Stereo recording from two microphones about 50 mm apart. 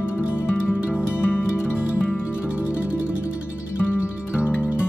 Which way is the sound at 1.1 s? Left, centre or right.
Left.